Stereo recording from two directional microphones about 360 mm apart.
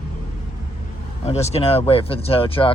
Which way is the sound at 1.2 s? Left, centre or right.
Centre.